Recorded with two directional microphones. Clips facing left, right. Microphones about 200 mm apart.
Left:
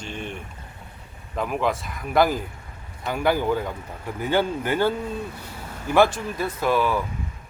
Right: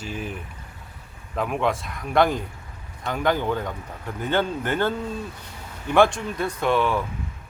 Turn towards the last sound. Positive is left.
turn(degrees=5)  # may be behind; listen again after turning